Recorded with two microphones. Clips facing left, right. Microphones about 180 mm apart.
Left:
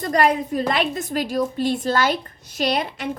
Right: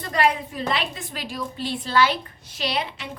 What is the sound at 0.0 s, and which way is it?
A woman's voice, 45° left (ahead or behind).